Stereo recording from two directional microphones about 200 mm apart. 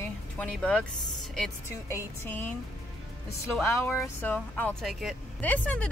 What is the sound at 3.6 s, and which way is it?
Speech, 10° left (ahead or behind).